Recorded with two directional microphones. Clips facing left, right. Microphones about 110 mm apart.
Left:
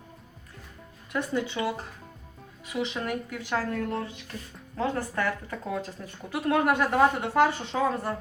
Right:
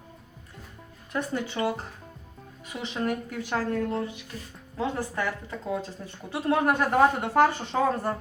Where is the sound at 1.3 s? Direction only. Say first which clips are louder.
Even; 45° right (ahead or behind).